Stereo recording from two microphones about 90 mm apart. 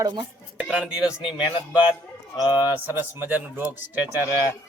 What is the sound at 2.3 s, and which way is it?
Speech, 55° left (ahead or behind).